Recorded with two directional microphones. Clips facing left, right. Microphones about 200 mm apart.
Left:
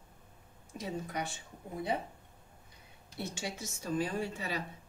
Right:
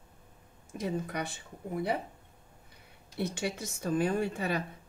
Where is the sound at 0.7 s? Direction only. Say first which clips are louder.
Right 4 dB; 60° right (ahead or behind).